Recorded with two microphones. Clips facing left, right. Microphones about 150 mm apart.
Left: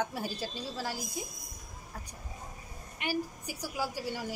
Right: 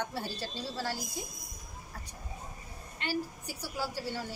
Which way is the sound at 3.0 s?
15° left (ahead or behind).